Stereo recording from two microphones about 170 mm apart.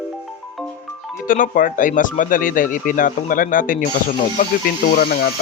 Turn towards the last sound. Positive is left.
turn(degrees=60)  # may be behind; listen again after turning